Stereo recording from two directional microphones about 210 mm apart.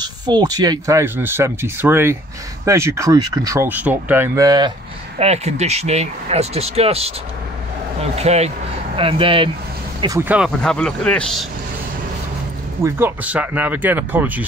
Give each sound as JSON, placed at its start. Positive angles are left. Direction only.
{"t": 0.0, "sound": "speech", "side_deg": -20}
{"t": 5.2, "sound": "speech", "side_deg": -30}
{"t": 10.6, "sound": "a man's voice", "side_deg": 5}
{"t": 12.8, "sound": "speech", "side_deg": -10}